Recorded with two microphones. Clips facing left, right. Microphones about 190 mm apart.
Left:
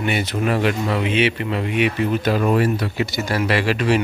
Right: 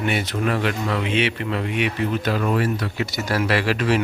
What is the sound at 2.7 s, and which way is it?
Speech, 10° left (ahead or behind).